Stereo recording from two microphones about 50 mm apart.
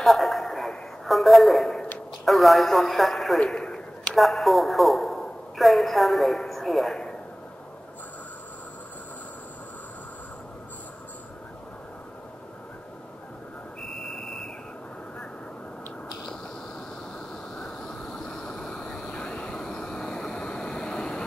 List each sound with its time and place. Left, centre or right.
0.0 s a sound: centre
2.2 s speech: centre
3.3 s a man's voice: centre
4.1 s a woman's voice: centre
13.9 s a sound: centre
17.6 s vehicle: centre